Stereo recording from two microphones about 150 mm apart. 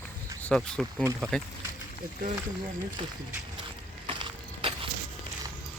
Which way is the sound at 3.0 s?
35° right (ahead or behind).